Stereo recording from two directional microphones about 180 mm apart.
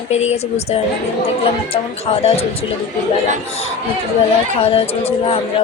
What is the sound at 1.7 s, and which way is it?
Speech, 35° left (ahead or behind).